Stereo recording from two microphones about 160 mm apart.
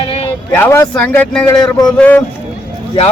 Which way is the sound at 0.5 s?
15° left (ahead or behind).